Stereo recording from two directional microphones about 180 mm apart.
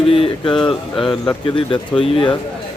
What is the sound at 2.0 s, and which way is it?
Speech, 30° left (ahead or behind).